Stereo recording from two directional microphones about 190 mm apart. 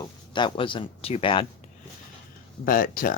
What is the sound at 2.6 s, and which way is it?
Speech, 50° left (ahead or behind).